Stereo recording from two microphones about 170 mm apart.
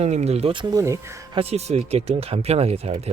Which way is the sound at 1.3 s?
35° right (ahead or behind).